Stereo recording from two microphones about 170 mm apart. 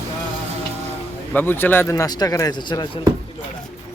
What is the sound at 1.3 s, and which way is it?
Speech, 10° left (ahead or behind).